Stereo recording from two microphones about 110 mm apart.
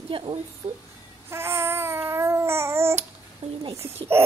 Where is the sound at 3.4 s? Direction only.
80° right.